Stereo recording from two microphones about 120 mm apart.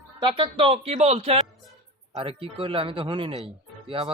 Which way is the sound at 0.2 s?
45° right (ahead or behind).